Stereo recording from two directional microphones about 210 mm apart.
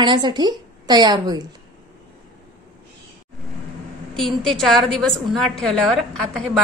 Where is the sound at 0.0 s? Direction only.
20° right (ahead or behind).